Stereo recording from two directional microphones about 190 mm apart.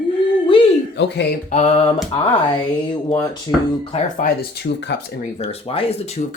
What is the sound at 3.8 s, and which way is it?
Speech, 30° left (ahead or behind).